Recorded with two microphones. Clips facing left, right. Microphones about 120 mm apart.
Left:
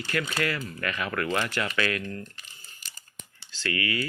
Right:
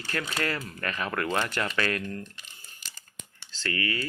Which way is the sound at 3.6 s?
35° right (ahead or behind).